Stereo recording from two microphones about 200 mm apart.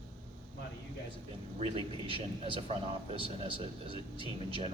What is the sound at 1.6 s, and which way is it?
A man's voice, 25° right (ahead or behind).